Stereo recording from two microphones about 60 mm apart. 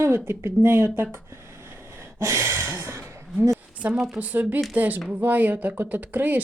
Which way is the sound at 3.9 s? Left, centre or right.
Centre.